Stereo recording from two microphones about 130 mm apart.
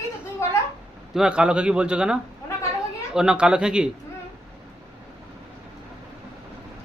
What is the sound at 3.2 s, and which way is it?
Speech, 5° right (ahead or behind).